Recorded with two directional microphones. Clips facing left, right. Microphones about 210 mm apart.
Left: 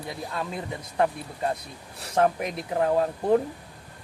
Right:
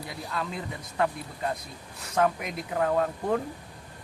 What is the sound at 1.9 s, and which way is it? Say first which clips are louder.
Speech: left 3 dB; 35° left (ahead or behind).